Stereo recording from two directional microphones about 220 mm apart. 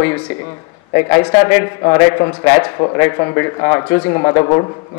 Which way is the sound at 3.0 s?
15° left (ahead or behind).